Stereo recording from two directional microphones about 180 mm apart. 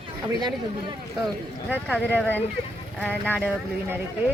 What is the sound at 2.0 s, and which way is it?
Speech, 10° left (ahead or behind).